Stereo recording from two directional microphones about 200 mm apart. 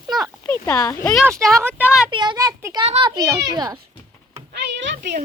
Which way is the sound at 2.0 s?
20° right (ahead or behind).